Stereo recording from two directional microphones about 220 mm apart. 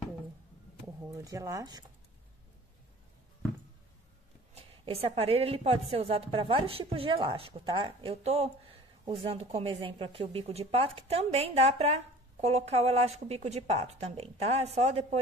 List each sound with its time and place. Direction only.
1.0 s speech: 15° right (ahead or behind)
4.6 s a woman's voice: 25° right (ahead or behind)